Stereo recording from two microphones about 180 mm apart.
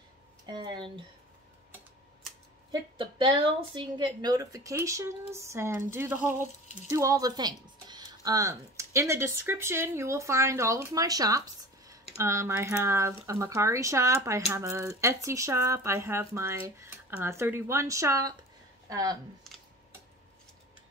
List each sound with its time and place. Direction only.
0.5 s speech: 25° right (ahead or behind)
2.7 s a woman's voice: 25° right (ahead or behind)